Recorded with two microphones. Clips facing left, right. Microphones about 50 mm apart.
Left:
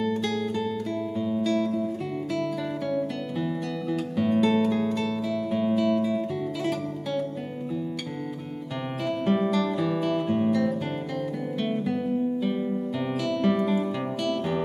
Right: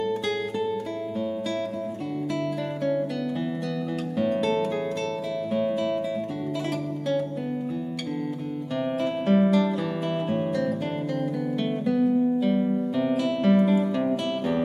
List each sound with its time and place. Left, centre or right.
1.1 s music: centre
3.9 s music: centre
9.0 s guitar: centre
13.9 s music: centre